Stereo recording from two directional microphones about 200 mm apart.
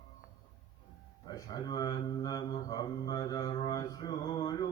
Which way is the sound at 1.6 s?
20° left (ahead or behind).